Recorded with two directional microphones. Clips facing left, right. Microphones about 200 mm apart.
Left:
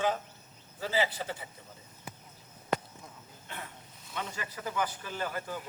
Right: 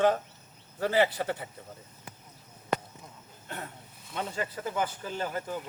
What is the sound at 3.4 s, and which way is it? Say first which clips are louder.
Wild animals: right 4 dB; 45° right (ahead or behind).